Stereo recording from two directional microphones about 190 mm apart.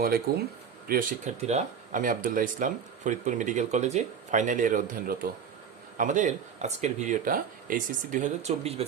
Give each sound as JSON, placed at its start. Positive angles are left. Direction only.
{"t": 0.3, "sound": "speech", "side_deg": -55}
{"t": 0.9, "sound": "speech", "side_deg": -45}